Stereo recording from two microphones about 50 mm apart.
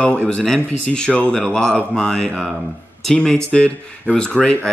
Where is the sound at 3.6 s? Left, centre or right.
Left.